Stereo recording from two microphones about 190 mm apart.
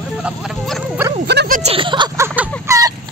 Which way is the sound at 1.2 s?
60° right (ahead or behind).